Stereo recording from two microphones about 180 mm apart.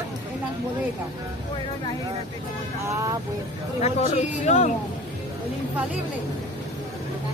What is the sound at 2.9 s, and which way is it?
Speech, 15° right (ahead or behind).